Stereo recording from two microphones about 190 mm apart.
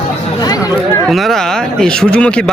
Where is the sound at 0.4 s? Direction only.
20° left (ahead or behind).